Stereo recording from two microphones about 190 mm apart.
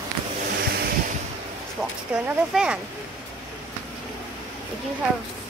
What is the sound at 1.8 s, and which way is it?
Speech, 5° right (ahead or behind).